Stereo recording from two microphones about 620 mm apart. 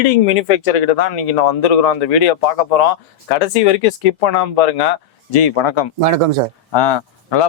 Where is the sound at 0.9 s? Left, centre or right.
Left.